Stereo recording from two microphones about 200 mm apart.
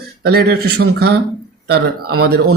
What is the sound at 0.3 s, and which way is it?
Speech, 50° right (ahead or behind).